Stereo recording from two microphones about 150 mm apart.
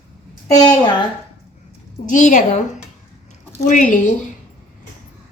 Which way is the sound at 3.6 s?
60° left (ahead or behind).